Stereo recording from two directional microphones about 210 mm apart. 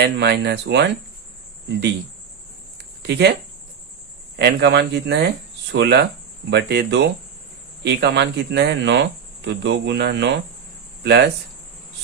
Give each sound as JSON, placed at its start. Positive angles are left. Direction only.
{"t": 0.0, "sound": "speech", "side_deg": -50}
{"t": 2.7, "sound": "a sound", "side_deg": -50}
{"t": 4.4, "sound": "speech", "side_deg": -55}